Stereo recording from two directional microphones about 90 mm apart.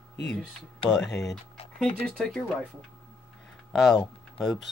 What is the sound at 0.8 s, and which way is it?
Speech, centre (ahead or behind).